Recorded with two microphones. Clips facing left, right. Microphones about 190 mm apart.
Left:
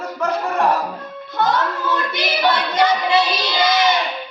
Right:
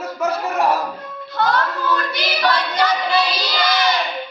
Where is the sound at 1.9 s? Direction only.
20° left (ahead or behind).